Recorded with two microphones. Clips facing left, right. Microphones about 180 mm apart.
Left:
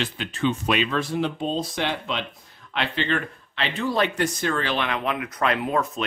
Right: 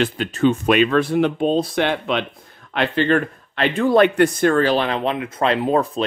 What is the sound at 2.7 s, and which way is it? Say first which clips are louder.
Speech: right 8 dB; 45° right (ahead or behind).